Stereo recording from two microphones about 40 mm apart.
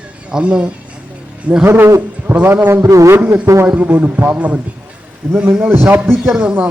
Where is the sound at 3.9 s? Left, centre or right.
Right.